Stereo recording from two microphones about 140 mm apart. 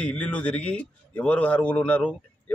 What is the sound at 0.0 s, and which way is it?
A man's voice, 10° left (ahead or behind).